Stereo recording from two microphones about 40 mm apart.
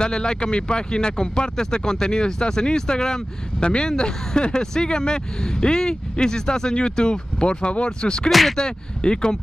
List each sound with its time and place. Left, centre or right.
0.0 s speech: centre
8.3 s speech: centre
8.5 s speech: left